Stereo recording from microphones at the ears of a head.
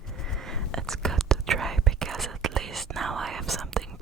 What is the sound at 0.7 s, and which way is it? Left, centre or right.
Whispering, right.